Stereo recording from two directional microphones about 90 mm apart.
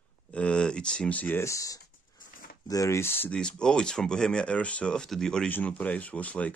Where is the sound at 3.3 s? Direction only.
10° left (ahead or behind).